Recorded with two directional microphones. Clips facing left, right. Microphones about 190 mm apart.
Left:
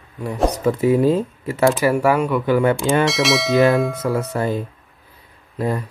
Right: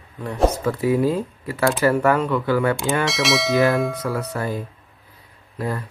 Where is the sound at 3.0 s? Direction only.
Centre (ahead or behind).